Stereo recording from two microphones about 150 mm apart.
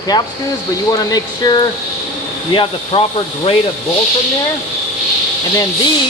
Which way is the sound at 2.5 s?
40° left (ahead or behind).